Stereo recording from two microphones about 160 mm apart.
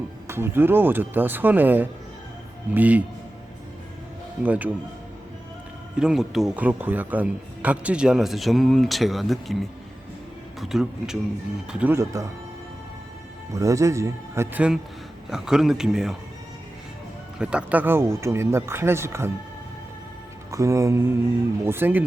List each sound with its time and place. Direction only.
0.3 s speech: 15° right (ahead or behind)
4.4 s speech: 10° right (ahead or behind)
6.0 s speech: centre (ahead or behind); by 12.3 s 20° right (ahead or behind)
13.5 s speech: 20° right (ahead or behind); by 16.1 s 5° right (ahead or behind)
17.3 s speech: 5° right (ahead or behind)
20.5 s speech: 20° right (ahead or behind)